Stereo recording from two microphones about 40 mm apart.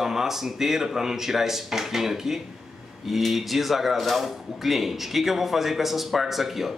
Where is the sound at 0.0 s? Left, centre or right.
Centre.